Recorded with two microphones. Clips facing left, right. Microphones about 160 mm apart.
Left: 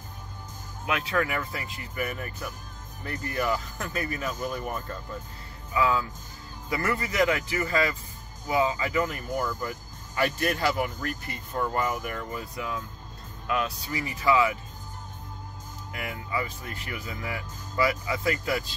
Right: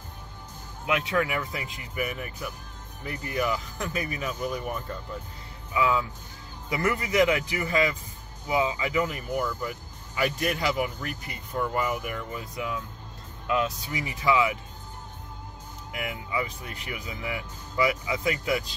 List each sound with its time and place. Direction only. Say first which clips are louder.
0.8 s speech: right 1 dB; 20° right (ahead or behind)
5.8 s speech: even; 15° right (ahead or behind)
15.9 s speech: right 1 dB; 15° right (ahead or behind)